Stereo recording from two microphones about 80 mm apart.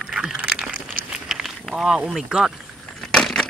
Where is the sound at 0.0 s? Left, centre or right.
Centre.